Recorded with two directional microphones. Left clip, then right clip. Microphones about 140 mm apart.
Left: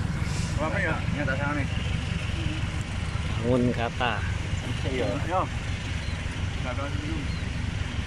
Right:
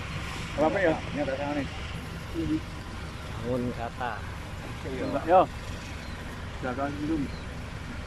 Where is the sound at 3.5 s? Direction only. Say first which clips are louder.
Left 6 dB; 5° left (ahead or behind).